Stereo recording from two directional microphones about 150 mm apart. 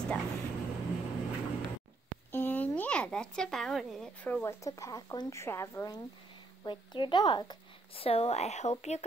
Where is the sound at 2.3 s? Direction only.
10° left (ahead or behind).